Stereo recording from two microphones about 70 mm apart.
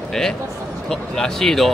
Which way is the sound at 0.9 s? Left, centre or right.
Centre.